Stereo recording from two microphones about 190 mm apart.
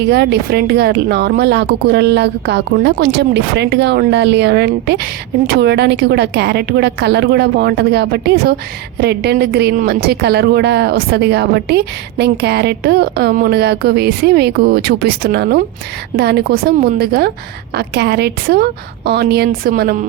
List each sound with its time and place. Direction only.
0.0 s a woman's voice: 60° right (ahead or behind)